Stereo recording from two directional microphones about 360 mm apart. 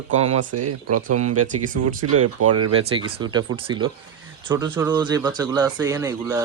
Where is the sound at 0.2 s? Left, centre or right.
Right.